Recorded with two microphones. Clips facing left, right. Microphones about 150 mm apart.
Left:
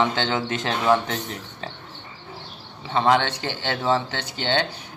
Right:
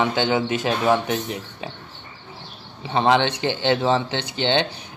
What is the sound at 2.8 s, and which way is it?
A man's voice, 20° right (ahead or behind).